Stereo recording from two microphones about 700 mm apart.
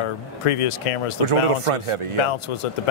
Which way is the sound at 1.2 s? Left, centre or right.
Right.